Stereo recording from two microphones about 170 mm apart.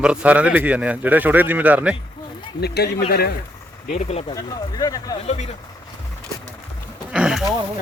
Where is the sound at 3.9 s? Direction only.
40° left (ahead or behind).